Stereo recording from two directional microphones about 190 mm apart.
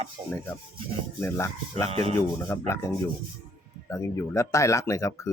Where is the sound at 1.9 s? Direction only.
35° right (ahead or behind).